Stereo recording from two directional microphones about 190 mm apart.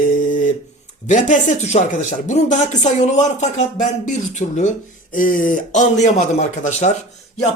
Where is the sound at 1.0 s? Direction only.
40° left (ahead or behind).